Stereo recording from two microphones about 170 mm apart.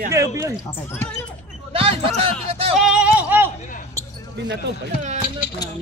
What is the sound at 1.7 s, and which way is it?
Basketball bounce, 35° right (ahead or behind).